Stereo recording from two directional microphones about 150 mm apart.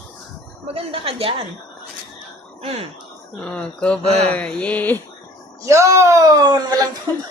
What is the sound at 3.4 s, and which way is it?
Speech, 5° left (ahead or behind).